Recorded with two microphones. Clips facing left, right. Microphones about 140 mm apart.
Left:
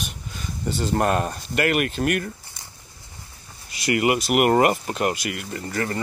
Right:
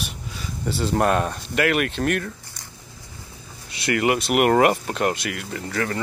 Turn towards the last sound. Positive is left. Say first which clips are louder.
# right 1 dB
turn(degrees=5)  # may be behind; listen again after turning